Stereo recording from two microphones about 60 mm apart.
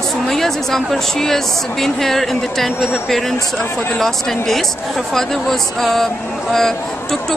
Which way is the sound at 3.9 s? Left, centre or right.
Centre.